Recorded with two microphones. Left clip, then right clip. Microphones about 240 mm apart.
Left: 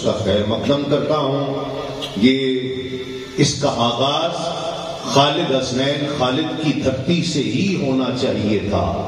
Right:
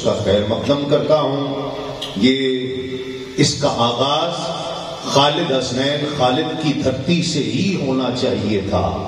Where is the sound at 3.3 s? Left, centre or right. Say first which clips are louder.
Right 1 dB; right.